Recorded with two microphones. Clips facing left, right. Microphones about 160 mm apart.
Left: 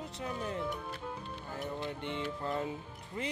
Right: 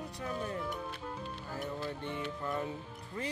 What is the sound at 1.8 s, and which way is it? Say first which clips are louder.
Speech: left 1 dB; 20° left (ahead or behind).